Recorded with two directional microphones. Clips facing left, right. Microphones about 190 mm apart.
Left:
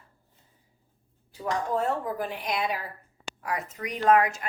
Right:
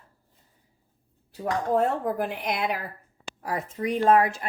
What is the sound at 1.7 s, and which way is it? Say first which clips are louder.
Speech: right 7 dB; 55° right (ahead or behind).